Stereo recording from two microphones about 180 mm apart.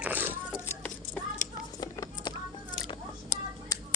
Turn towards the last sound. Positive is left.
turn(degrees=20)  # may be behind; listen again after turning